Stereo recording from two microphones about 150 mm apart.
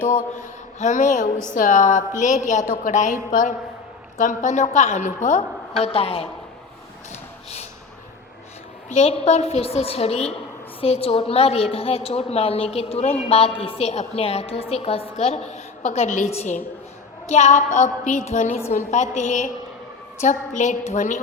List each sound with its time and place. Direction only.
0.0 s mantra: 60° left (ahead or behind)
4.2 s a woman's voice: 60° left (ahead or behind); by 6.2 s 40° left (ahead or behind)
7.1 s a sound: 50° left (ahead or behind)
8.9 s a woman's voice: 45° left (ahead or behind)